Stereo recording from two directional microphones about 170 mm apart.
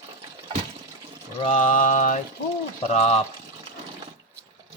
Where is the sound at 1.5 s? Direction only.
50° left (ahead or behind).